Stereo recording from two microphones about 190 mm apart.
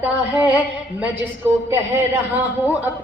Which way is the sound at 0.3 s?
10° right (ahead or behind).